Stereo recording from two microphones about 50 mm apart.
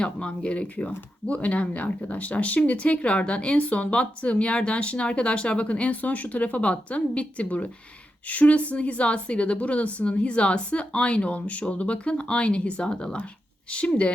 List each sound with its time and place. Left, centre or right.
0.0 s speech: left